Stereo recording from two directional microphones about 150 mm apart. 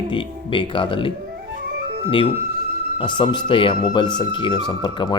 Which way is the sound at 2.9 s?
35° left (ahead or behind).